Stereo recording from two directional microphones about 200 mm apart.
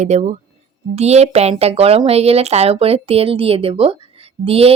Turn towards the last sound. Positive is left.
turn(degrees=-30)  # may be behind; listen again after turning